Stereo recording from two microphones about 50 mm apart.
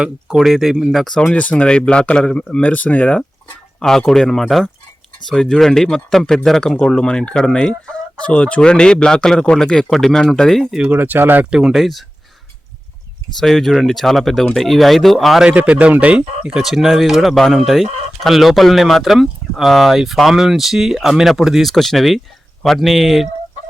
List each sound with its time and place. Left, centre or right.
0.3 s speech: centre
1.2 s speech: left
3.8 s speech: centre
10.9 s speech: right
11.7 s speech: centre
13.4 s speech: centre
15.4 s speech: right
16.6 s speech: centre
21.7 s speech: centre